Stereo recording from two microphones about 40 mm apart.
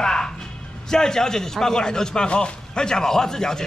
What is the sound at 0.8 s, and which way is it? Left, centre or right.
A man's voice, centre.